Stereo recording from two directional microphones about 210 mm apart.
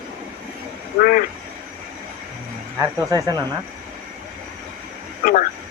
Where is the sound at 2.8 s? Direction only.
15° right (ahead or behind).